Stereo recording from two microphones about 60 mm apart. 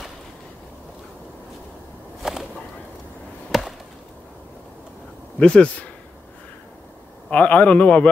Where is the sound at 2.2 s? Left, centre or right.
Centre.